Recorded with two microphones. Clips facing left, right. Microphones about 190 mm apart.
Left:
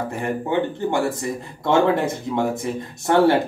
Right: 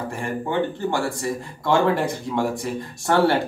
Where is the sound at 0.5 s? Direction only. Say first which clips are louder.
Left 1 dB; 20° left (ahead or behind).